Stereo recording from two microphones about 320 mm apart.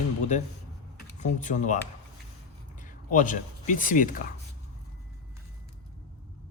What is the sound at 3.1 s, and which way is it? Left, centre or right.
Speech, left.